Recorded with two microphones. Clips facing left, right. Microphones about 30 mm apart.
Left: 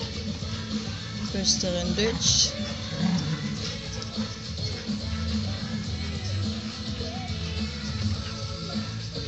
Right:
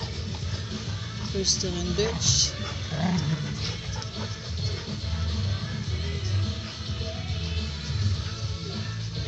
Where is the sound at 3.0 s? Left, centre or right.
Left.